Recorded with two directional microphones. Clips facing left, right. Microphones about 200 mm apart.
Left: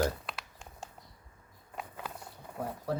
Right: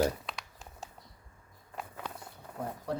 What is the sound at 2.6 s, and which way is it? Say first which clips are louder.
Speech: left 1 dB; 5° left (ahead or behind).